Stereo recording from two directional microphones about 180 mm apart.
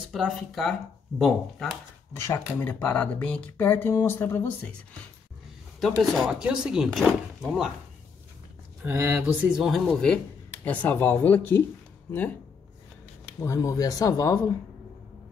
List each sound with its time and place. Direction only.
0.1 s speech: centre (ahead or behind)
2.1 s speech: 15° left (ahead or behind)
5.8 s speech: centre (ahead or behind)
8.8 s speech: 10° right (ahead or behind); by 11.6 s 10° left (ahead or behind)
13.4 s speech: 15° left (ahead or behind)